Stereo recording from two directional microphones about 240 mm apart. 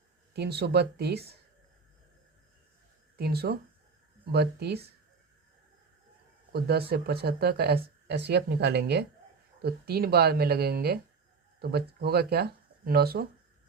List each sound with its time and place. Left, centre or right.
0.3 s speech: right
3.2 s speech: right
6.5 s speech: right